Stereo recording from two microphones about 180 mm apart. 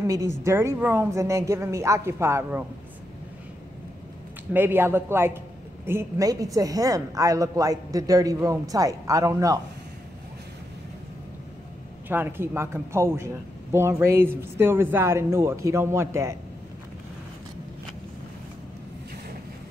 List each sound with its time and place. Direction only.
0.0 s a woman's voice: 15° right (ahead or behind)
4.6 s a woman's voice: 10° right (ahead or behind)
12.1 s a woman's voice: 10° right (ahead or behind)